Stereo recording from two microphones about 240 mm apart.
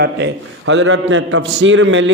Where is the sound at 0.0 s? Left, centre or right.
Right.